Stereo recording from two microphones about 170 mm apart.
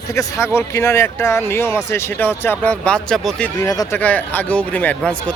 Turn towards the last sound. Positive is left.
turn(degrees=5)  # may be behind; listen again after turning